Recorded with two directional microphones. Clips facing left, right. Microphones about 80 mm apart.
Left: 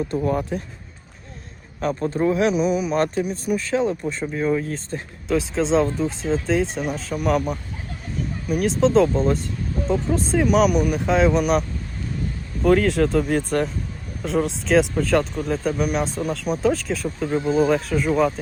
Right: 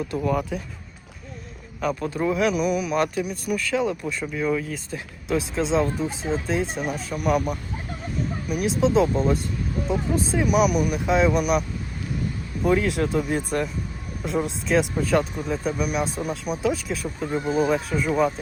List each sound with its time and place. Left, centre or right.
0.3 s speech: left
2.2 s speech: centre
2.9 s speech: left
4.9 s speech: centre
12.6 s speech: centre